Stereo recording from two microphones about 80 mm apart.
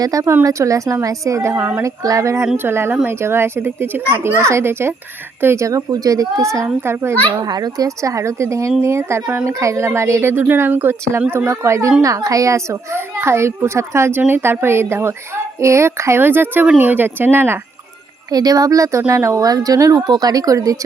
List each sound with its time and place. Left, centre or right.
0.0 s speech: right
1.5 s speech: right
1.8 s a child's voice: right
7.4 s a child's voice: right
18.3 s speech: right
20.0 s speech: right